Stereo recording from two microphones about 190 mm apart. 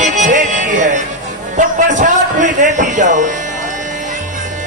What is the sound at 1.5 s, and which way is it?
A man's voice, 40° right (ahead or behind).